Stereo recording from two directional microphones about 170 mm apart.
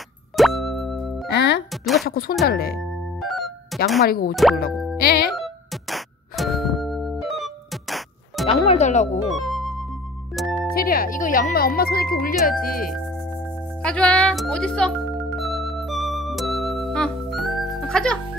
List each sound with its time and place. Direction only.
0.4 s music: centre (ahead or behind)
1.3 s music: 80° left
1.7 s a sound: centre (ahead or behind)
2.0 s speech: 60° left (ahead or behind)
2.8 s music: centre (ahead or behind)
4.0 s speech: 60° left (ahead or behind)
5.3 s music: centre (ahead or behind)
8.5 s speech: 40° left (ahead or behind)
9.3 s music: centre (ahead or behind)
10.7 s speech: 60° left (ahead or behind)
13.8 s music: 5° left (ahead or behind)